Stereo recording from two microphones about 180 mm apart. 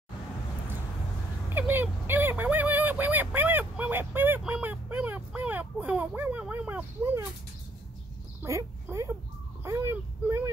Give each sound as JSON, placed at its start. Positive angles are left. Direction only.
{"t": 1.5, "sound": "fowl", "side_deg": -10}
{"t": 8.4, "sound": "speech", "side_deg": -15}
{"t": 9.7, "sound": "vehicle", "side_deg": -15}